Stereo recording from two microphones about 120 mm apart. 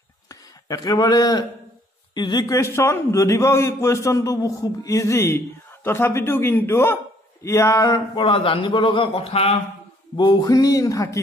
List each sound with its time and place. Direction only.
0.3 s a man's voice: 30° left (ahead or behind); by 9.6 s 55° left (ahead or behind)
10.1 s a man's voice: 35° left (ahead or behind)